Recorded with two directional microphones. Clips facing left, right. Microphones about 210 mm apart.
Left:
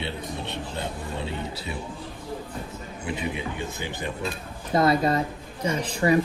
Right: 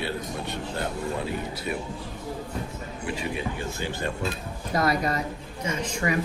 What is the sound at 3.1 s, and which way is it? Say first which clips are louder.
A man's voice: even; 20° left (ahead or behind).